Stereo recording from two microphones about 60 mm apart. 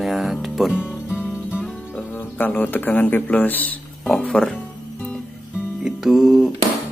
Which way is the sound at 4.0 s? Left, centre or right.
Centre.